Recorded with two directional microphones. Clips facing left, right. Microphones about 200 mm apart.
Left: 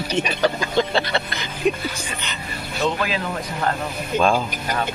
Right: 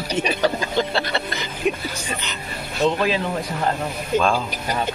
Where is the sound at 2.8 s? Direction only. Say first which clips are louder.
Right 3 dB; 30° right (ahead or behind).